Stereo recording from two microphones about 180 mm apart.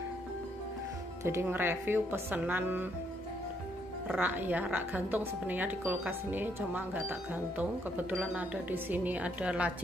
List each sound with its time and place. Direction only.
1.2 s speech: 15° right (ahead or behind)
4.1 s speech: 10° right (ahead or behind)